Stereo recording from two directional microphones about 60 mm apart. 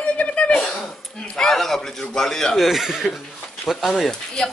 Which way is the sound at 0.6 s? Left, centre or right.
Centre.